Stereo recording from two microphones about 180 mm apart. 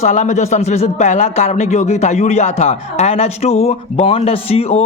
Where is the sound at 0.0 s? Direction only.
40° left (ahead or behind).